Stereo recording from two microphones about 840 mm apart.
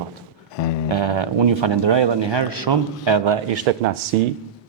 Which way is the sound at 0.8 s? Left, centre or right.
Right.